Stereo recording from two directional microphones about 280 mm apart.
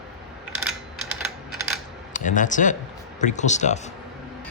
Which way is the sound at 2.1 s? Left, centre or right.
Left.